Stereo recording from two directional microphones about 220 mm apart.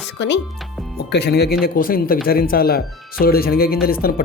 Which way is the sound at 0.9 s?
50° left (ahead or behind).